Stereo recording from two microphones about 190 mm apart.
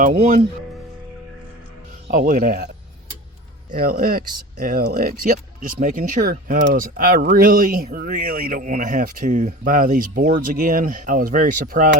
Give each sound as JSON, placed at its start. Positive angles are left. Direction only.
{"t": 0.0, "sound": "speech", "side_deg": -40}
{"t": 2.0, "sound": "speech", "side_deg": -45}
{"t": 3.7, "sound": "speech", "side_deg": -50}